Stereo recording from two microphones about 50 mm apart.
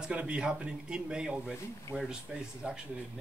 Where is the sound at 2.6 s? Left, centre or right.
Centre.